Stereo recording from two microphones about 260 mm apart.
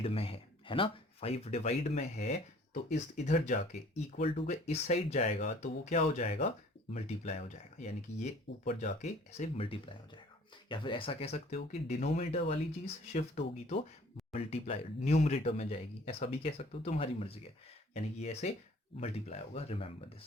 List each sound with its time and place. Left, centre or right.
0.0 s speech: left
7.8 s speech: left